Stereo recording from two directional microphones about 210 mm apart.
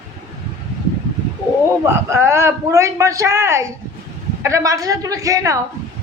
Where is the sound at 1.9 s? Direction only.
10° right (ahead or behind).